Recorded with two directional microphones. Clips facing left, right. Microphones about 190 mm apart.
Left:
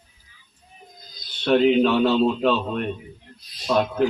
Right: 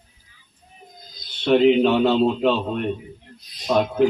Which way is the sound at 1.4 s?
20° right (ahead or behind).